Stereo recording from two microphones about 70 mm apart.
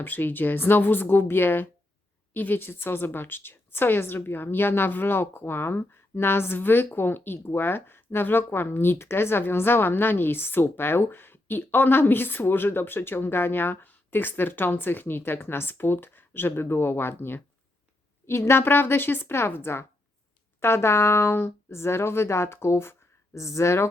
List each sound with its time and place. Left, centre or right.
0.0 s a woman's voice: left